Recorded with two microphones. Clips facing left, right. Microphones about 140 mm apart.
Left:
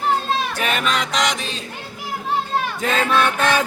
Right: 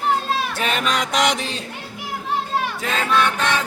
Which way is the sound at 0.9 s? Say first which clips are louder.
Right 1 dB; 50° right (ahead or behind).